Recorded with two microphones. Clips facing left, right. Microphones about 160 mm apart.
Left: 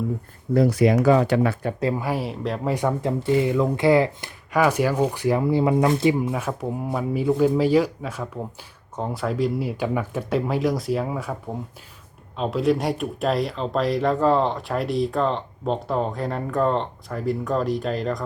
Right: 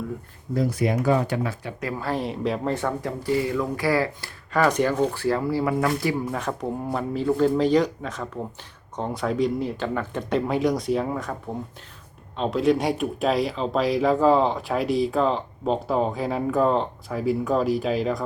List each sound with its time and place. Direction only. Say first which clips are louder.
0.5 s speech: left 6 dB; 75° left (ahead or behind)
2.0 s speech: even; 10° left (ahead or behind)
2.7 s speech: left 4 dB; 20° left (ahead or behind)
6.3 s speech: left 1 dB; 5° left (ahead or behind)
12.4 s speech: even; centre (ahead or behind)